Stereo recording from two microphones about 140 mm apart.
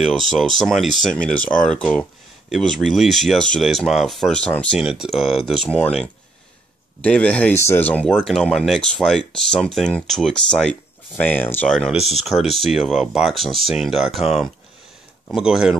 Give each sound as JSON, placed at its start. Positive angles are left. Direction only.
{"t": 0.4, "sound": "speech", "side_deg": 0}
{"t": 4.7, "sound": "speech", "side_deg": -5}
{"t": 7.0, "sound": "speech", "side_deg": 10}